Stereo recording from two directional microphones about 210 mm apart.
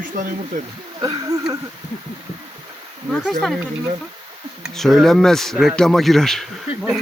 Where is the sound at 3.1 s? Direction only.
Centre (ahead or behind).